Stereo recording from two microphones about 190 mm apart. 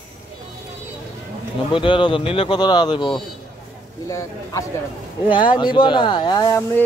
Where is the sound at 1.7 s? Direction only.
25° left (ahead or behind).